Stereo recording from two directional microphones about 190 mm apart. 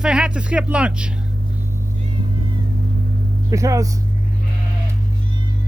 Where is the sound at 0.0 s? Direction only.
5° right (ahead or behind).